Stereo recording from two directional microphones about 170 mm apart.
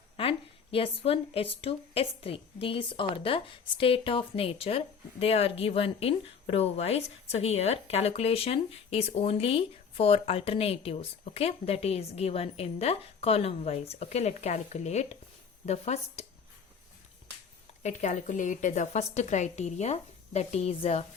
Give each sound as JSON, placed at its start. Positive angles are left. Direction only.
{"t": 0.2, "sound": "speech", "side_deg": 30}
{"t": 17.8, "sound": "speech", "side_deg": 45}